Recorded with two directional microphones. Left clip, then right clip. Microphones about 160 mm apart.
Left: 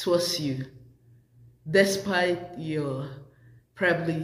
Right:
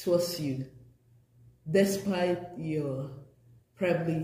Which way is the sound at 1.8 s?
20° right (ahead or behind).